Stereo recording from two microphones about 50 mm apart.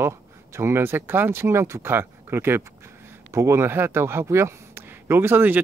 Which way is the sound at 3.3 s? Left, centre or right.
Right.